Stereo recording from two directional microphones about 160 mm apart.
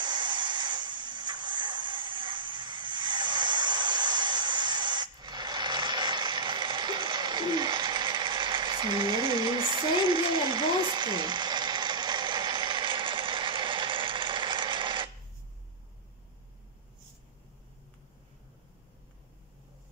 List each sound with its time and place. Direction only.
0.0 s music: 30° right (ahead or behind)